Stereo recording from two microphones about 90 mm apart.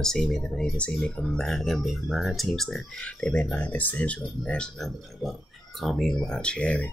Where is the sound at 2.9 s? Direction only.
10° left (ahead or behind).